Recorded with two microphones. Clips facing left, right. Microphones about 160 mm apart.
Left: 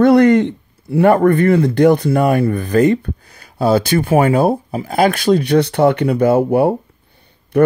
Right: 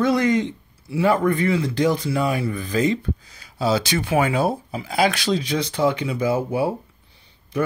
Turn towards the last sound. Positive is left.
turn(degrees=65)  # may be behind; listen again after turning